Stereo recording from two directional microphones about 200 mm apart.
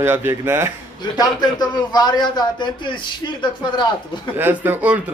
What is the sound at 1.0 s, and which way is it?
A man's voice, 20° left (ahead or behind).